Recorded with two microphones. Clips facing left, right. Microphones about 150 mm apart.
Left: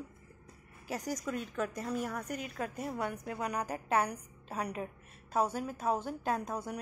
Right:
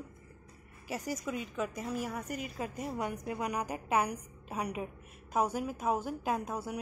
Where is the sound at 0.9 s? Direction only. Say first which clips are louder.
Even; 5° right (ahead or behind).